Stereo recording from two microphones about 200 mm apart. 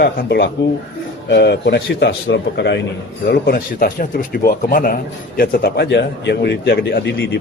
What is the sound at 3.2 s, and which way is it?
Speech, 45° left (ahead or behind).